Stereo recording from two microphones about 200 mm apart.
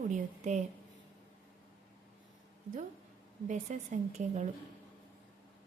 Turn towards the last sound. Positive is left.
turn(degrees=-35)  # may be behind; listen again after turning